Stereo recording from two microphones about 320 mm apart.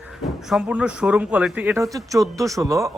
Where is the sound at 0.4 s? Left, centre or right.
Centre.